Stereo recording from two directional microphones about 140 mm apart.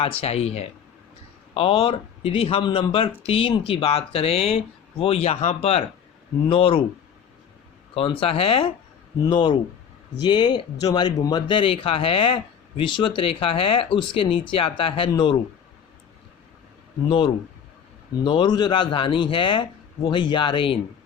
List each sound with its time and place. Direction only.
0.2 s speech: 45° left (ahead or behind)
7.9 s speech: 40° left (ahead or behind)
9.2 s speech: 30° left (ahead or behind)
17.1 s speech: 35° left (ahead or behind)